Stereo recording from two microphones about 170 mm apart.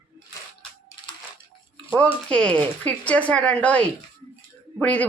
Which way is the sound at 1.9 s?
5° left (ahead or behind).